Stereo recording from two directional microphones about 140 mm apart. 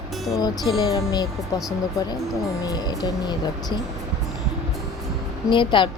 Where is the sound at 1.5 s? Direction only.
25° left (ahead or behind).